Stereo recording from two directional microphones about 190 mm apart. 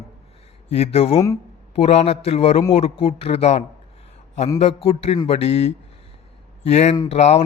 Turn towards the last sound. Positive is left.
turn(degrees=35)  # may be behind; listen again after turning